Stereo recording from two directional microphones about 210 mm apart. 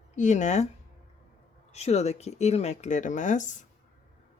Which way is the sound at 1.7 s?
30° left (ahead or behind).